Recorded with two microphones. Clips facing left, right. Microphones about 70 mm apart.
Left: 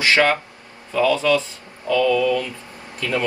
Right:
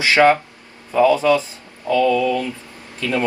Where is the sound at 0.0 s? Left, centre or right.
Right.